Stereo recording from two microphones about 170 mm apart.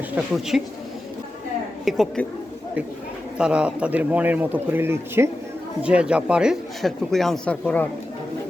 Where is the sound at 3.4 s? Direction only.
5° right (ahead or behind).